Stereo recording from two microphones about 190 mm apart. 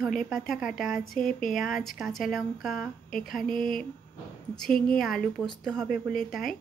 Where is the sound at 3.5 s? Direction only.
45° left (ahead or behind).